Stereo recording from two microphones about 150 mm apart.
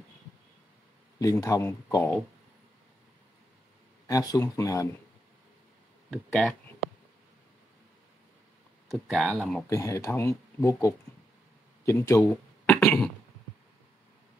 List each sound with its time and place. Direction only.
1.2 s speech: 20° left (ahead or behind)
4.1 s speech: 25° left (ahead or behind)
6.0 s speech: 5° left (ahead or behind)
8.9 s speech: centre (ahead or behind)
9.7 s speech: 20° left (ahead or behind)
12.6 s a sound: 15° left (ahead or behind)